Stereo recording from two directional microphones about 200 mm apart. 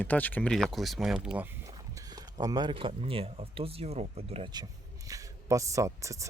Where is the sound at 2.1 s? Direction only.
20° right (ahead or behind).